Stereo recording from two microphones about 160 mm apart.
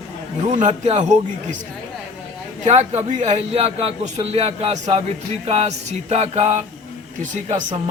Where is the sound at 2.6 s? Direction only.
45° right (ahead or behind).